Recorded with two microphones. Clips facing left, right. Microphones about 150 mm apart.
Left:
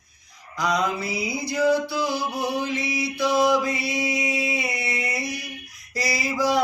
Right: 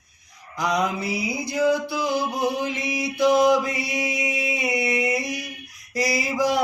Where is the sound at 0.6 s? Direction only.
15° right (ahead or behind).